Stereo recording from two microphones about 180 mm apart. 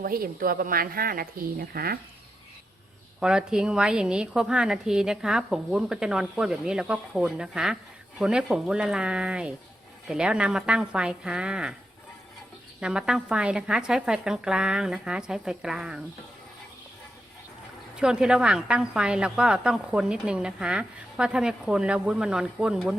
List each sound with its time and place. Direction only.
0.0 s speech: 55° right (ahead or behind)
3.2 s a woman's voice: 5° right (ahead or behind)
12.8 s a woman's voice: 5° right (ahead or behind)
18.0 s a woman's voice: 5° right (ahead or behind)